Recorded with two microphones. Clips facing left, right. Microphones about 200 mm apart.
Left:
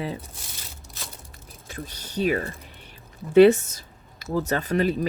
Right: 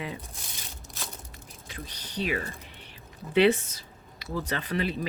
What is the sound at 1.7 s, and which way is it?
Speech, 45° left (ahead or behind).